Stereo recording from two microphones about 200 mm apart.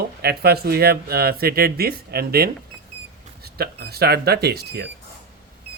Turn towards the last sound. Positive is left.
turn(degrees=-55)  # may be behind; listen again after turning